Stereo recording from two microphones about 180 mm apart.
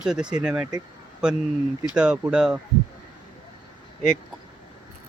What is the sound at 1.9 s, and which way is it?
Speech, 5° right (ahead or behind).